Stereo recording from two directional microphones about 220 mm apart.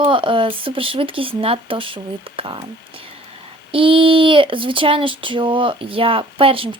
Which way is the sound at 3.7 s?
25° right (ahead or behind).